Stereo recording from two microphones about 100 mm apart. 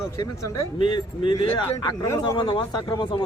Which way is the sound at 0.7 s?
50° left (ahead or behind).